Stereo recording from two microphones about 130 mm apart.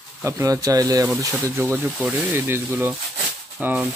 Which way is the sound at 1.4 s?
15° right (ahead or behind).